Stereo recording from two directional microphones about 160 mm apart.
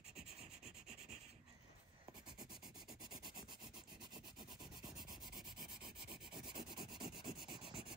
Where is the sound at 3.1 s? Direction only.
25° right (ahead or behind).